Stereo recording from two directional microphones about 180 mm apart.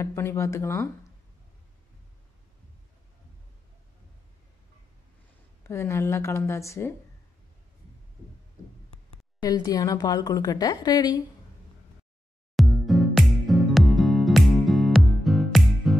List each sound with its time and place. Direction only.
0.0 s speech: 15° left (ahead or behind)
5.6 s speech: 15° left (ahead or behind)
9.4 s a woman's voice: 20° left (ahead or behind)
12.5 s music: centre (ahead or behind)